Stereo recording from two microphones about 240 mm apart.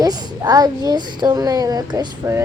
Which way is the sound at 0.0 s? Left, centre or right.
Centre.